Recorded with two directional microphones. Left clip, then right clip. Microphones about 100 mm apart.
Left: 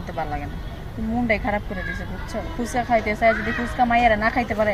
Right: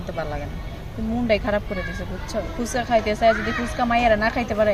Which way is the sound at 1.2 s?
10° right (ahead or behind).